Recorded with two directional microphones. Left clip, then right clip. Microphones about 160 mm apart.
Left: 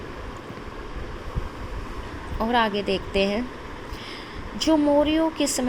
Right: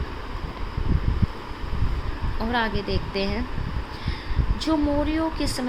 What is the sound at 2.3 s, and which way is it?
Speech, 20° left (ahead or behind).